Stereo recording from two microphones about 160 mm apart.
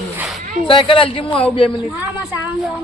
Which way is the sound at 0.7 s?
35° left (ahead or behind).